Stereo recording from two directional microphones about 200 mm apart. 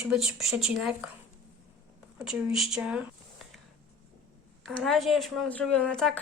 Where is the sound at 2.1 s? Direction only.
Centre (ahead or behind).